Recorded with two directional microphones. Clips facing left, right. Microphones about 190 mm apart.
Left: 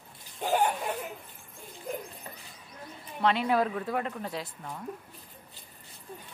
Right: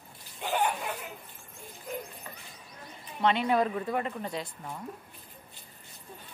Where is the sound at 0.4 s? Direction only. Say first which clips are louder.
Left 3 dB; 40° left (ahead or behind).